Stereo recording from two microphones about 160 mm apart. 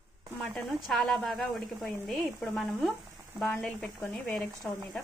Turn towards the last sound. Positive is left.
turn(degrees=5)  # may be behind; listen again after turning